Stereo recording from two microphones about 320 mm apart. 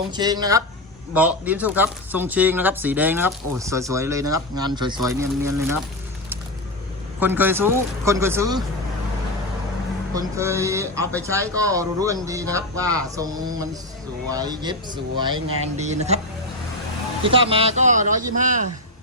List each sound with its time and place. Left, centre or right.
0.1 s speech: centre
7.2 s speech: centre
10.2 s speech: centre
17.2 s speech: centre